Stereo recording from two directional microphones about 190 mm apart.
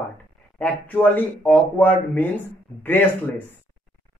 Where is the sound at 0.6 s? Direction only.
10° left (ahead or behind).